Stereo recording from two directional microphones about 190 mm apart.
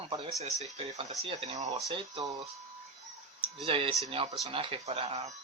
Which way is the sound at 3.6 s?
30° right (ahead or behind).